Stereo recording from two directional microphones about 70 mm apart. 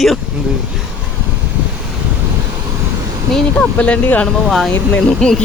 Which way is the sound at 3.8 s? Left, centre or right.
Centre.